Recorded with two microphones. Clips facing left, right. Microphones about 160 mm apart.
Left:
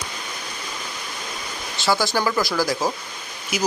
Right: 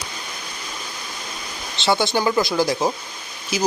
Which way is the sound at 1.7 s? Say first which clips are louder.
Right 2 dB; 25° right (ahead or behind).